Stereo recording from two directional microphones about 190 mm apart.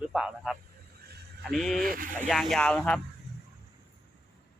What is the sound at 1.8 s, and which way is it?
Speech, 50° right (ahead or behind).